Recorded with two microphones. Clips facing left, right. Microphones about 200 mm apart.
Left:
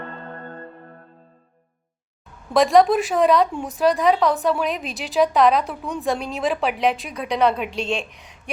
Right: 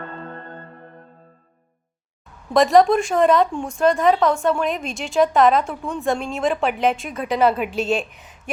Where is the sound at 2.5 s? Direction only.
Centre (ahead or behind).